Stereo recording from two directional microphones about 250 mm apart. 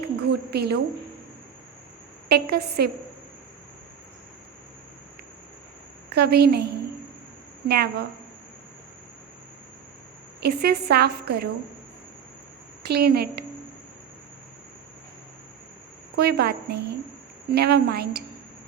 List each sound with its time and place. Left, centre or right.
0.2 s a sound: right
2.3 s a woman's voice: right
6.1 s a woman's voice: right
10.4 s a woman's voice: right
12.8 s a woman's voice: right
16.1 s a woman's voice: right